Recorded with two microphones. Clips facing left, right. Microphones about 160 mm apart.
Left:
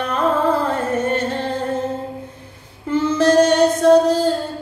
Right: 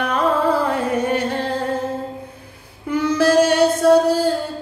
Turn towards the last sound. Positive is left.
turn(degrees=-10)  # may be behind; listen again after turning